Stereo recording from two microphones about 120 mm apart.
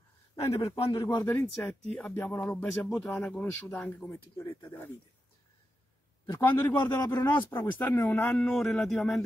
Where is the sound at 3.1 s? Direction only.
10° left (ahead or behind).